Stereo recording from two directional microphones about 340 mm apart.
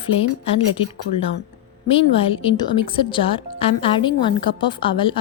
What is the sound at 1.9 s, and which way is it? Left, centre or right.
A woman's voice, centre.